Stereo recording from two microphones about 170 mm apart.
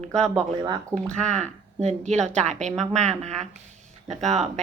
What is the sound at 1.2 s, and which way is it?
A woman's voice, 45° right (ahead or behind).